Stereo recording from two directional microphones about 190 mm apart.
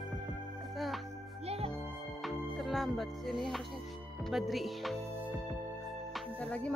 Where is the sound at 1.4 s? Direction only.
30° right (ahead or behind).